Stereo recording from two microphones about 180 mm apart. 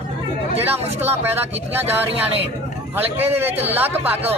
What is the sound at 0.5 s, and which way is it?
Speech, 35° right (ahead or behind).